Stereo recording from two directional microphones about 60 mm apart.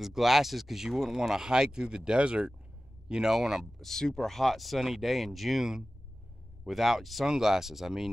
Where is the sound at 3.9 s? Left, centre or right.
Centre.